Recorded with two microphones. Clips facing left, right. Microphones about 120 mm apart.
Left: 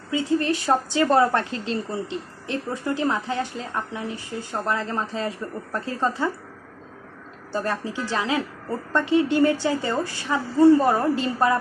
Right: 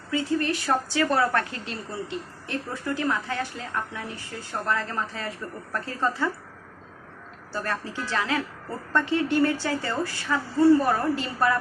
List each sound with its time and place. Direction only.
0.1 s speech: 25° left (ahead or behind)
7.5 s speech: 20° left (ahead or behind)